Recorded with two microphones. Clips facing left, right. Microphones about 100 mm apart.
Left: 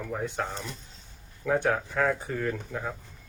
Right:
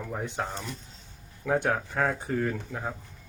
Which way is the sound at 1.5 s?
20° right (ahead or behind).